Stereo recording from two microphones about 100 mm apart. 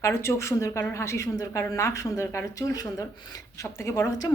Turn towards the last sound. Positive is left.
turn(degrees=35)  # may be behind; listen again after turning